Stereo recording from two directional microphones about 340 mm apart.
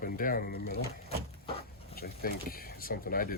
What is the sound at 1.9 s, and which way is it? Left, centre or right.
Speech, left.